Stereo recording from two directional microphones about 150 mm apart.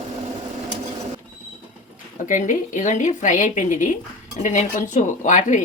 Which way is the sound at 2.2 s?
60° left (ahead or behind).